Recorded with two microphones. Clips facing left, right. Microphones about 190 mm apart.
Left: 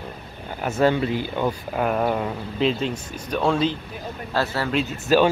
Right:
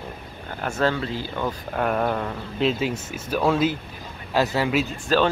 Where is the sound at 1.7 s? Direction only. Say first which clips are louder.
Even; 5° left (ahead or behind).